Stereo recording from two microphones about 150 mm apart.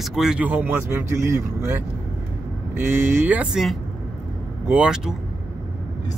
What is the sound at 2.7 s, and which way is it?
Speech, 15° right (ahead or behind).